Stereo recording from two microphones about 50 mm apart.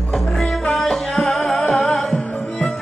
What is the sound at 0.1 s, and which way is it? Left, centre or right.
Music, centre.